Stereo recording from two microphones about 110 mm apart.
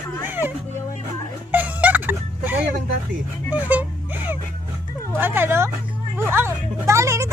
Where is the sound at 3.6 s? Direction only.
15° right (ahead or behind).